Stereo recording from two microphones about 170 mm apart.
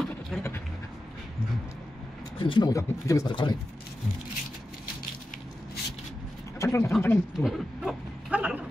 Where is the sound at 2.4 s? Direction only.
25° left (ahead or behind).